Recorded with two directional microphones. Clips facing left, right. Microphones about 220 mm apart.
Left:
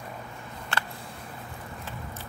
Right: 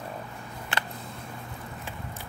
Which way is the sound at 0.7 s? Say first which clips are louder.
Even; 15° right (ahead or behind).